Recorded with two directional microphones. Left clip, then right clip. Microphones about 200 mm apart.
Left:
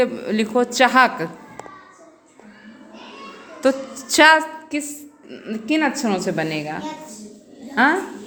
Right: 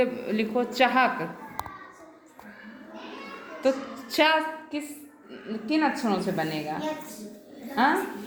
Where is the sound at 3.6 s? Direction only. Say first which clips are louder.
Left 6 dB; 40° left (ahead or behind).